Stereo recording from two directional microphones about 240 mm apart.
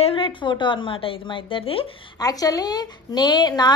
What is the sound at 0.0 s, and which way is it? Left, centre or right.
A woman's voice, left.